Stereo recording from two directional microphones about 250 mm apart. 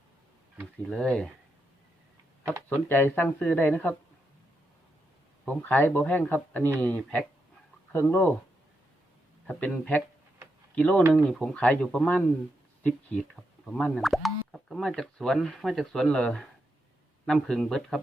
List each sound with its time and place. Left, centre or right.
0.9 s speech: centre
2.6 s speech: centre
5.6 s speech: centre
9.5 s speech: centre